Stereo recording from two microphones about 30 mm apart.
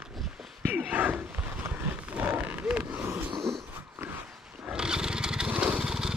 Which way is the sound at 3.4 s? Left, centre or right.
Centre.